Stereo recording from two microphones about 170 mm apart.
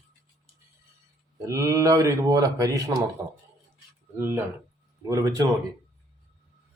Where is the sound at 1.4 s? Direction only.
20° right (ahead or behind).